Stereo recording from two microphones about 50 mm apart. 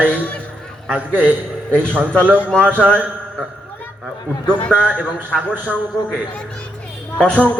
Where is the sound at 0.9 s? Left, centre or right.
Right.